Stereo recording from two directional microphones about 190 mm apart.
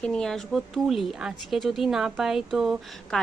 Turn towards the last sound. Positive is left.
turn(degrees=0)  # may be behind; listen again after turning